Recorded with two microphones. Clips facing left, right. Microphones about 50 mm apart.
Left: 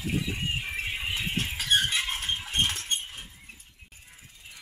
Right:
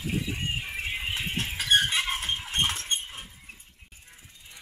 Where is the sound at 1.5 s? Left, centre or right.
Right.